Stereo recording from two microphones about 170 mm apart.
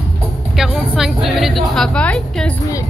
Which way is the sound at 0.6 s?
5° right (ahead or behind).